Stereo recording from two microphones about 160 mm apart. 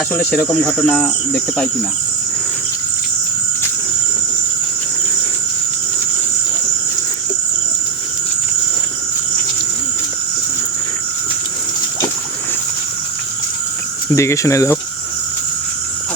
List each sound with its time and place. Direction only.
0.1 s cricket: 10° left (ahead or behind)
14.1 s speech: 15° left (ahead or behind)